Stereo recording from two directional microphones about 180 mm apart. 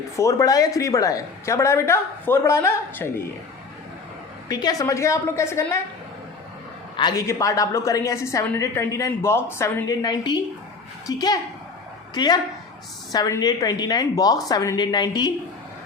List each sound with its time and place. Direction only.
0.2 s a woman's voice: 20° left (ahead or behind)
4.4 s a woman's voice: 20° left (ahead or behind)
6.9 s a woman's voice: 20° left (ahead or behind)